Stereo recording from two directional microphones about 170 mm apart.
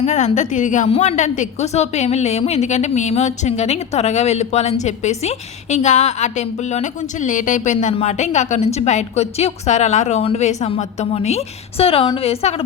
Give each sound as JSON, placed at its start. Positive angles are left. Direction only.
{"t": 0.0, "sound": "a woman's voice", "side_deg": 45}